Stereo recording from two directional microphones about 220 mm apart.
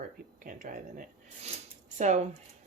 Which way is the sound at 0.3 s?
40° right (ahead or behind).